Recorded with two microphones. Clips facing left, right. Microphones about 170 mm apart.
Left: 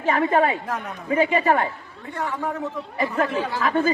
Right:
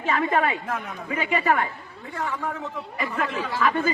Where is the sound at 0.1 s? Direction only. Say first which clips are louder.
Left 4 dB; 30° left (ahead or behind).